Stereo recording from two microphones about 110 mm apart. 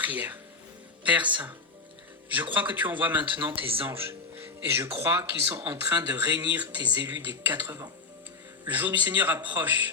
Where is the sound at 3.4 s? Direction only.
55° right (ahead or behind).